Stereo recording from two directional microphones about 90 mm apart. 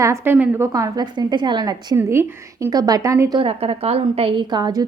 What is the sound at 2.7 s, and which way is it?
Speech, 45° right (ahead or behind).